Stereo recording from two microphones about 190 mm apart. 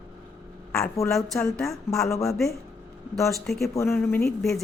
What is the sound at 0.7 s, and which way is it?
Speech, 15° left (ahead or behind).